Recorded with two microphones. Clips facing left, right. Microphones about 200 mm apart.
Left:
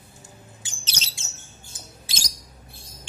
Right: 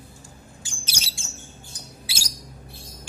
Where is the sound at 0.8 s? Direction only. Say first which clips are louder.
Even; 10° right (ahead or behind).